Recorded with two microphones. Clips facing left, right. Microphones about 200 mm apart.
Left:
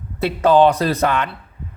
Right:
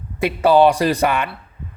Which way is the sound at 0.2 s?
10° right (ahead or behind).